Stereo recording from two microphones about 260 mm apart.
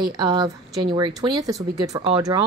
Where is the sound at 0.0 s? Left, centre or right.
Centre.